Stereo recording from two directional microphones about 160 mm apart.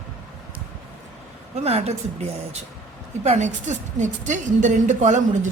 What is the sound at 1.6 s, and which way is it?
A woman's voice, 40° right (ahead or behind).